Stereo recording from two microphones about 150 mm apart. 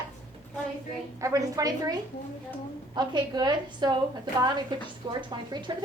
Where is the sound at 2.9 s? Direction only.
30° right (ahead or behind).